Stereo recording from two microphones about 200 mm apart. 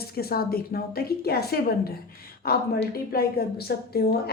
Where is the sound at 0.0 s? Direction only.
50° left (ahead or behind).